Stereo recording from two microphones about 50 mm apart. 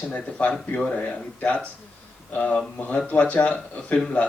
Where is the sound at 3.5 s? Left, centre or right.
Centre.